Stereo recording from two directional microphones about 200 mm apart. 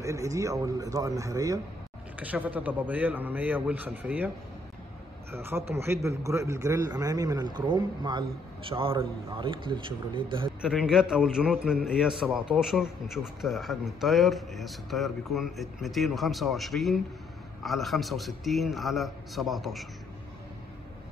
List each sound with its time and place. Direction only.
0.0 s a man's voice: 15° right (ahead or behind)
5.3 s a man's voice: 10° right (ahead or behind)
10.6 s a man's voice: 5° right (ahead or behind)